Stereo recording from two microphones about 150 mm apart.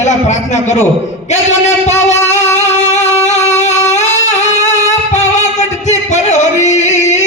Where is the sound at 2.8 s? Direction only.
50° left (ahead or behind).